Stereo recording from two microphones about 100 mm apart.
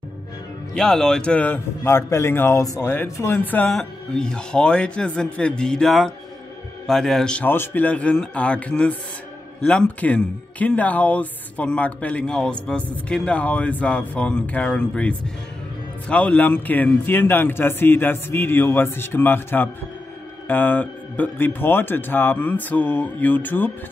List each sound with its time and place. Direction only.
0.7 s speech: 5° left (ahead or behind)
1.8 s speech: 25° left (ahead or behind); by 7.4 s 5° left (ahead or behind)
7.4 s speech: 20° left (ahead or behind)